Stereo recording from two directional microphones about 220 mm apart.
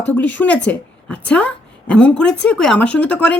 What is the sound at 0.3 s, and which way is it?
A woman's voice, 5° left (ahead or behind).